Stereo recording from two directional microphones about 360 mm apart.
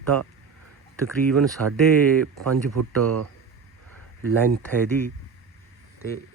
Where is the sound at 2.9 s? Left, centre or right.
Right.